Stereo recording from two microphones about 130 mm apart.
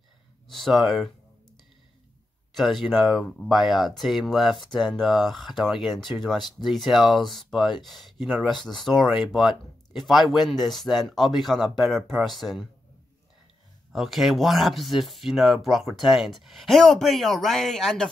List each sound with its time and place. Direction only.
0.5 s speech: centre (ahead or behind)
2.5 s speech: centre (ahead or behind)
13.9 s speech: centre (ahead or behind)